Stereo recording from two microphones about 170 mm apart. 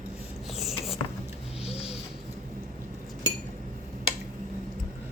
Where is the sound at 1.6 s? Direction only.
35° left (ahead or behind).